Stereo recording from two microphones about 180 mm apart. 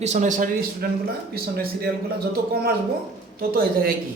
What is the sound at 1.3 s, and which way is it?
A man's voice, 60° right (ahead or behind).